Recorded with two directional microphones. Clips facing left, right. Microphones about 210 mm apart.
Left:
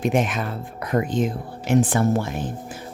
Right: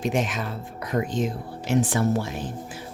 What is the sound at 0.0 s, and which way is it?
Speech, 55° left (ahead or behind).